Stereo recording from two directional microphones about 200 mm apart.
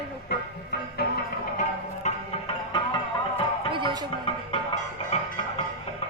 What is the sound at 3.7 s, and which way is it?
Music, 25° right (ahead or behind).